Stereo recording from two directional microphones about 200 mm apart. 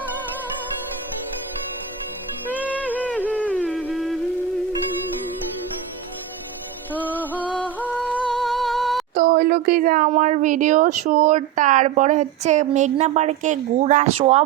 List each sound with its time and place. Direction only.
2.6 s music: 10° left (ahead or behind)
6.9 s music: 10° left (ahead or behind)
9.1 s speech: 50° right (ahead or behind); by 14.4 s 30° right (ahead or behind)